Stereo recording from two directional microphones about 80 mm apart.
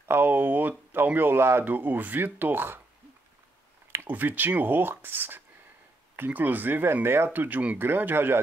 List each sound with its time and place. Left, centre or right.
0.1 s speech: right
3.9 s speech: right